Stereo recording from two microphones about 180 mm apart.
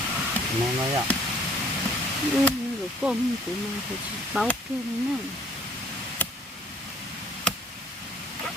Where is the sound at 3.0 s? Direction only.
5° right (ahead or behind).